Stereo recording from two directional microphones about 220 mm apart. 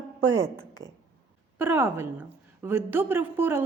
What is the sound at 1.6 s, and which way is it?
A woman's voice, 10° right (ahead or behind).